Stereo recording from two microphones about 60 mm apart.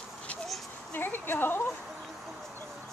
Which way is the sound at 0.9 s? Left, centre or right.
Left.